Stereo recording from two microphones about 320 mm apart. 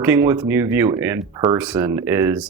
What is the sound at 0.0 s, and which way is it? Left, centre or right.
Speech, centre.